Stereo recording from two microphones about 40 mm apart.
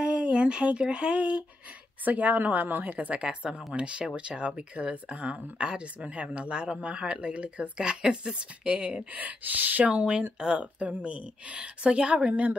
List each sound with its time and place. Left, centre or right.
0.0 s speech: right
2.0 s speech: right
3.1 s speech: right
10.6 s speech: right